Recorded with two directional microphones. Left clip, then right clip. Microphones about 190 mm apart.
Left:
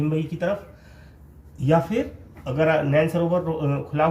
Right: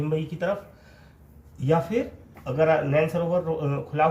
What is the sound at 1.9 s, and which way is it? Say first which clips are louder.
Speech: left 1 dB; 20° right (ahead or behind).